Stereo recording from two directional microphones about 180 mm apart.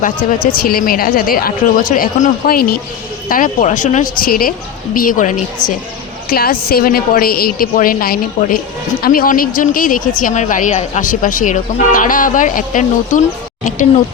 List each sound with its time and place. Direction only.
0.5 s a woman's voice: 55° left (ahead or behind)